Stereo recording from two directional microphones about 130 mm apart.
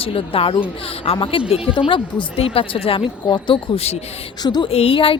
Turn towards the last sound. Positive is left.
turn(degrees=45)  # may be behind; listen again after turning